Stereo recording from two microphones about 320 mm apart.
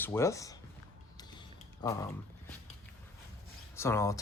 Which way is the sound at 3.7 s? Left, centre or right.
Centre.